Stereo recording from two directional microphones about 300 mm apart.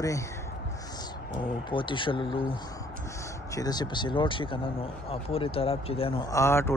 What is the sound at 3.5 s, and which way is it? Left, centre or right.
Speech, centre.